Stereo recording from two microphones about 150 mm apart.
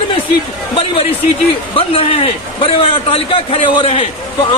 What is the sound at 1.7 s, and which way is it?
A man's voice, 40° left (ahead or behind).